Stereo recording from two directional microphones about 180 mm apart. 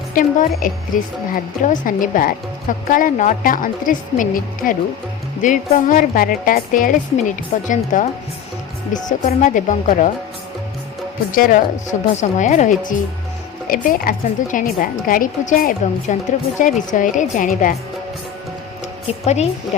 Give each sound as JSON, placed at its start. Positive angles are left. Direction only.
{"t": 0.1, "sound": "a woman's voice", "side_deg": 50}
{"t": 11.3, "sound": "a woman's voice", "side_deg": 50}
{"t": 19.2, "sound": "a woman's voice", "side_deg": 35}